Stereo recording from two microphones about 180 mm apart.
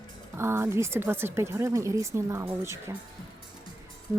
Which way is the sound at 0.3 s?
15° right (ahead or behind).